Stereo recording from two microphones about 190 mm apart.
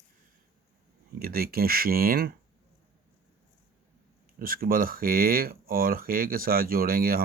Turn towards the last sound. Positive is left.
turn(degrees=-50)  # may be behind; listen again after turning